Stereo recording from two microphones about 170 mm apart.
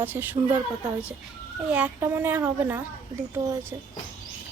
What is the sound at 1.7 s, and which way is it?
A woman's voice, 10° right (ahead or behind).